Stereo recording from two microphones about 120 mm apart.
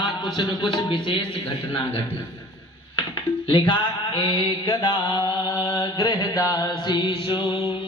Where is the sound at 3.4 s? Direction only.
45° left (ahead or behind).